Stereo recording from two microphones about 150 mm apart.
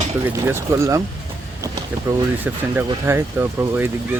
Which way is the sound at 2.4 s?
15° right (ahead or behind).